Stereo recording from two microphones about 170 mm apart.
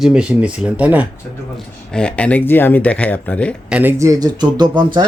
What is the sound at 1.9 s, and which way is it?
Speech, 5° left (ahead or behind).